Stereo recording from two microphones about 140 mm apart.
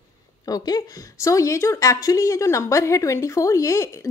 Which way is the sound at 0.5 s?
25° left (ahead or behind).